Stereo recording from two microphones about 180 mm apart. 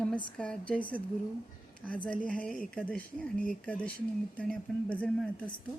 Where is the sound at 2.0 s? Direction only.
5° left (ahead or behind).